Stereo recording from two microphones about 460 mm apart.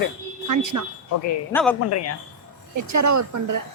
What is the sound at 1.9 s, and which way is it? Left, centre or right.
Speech, left.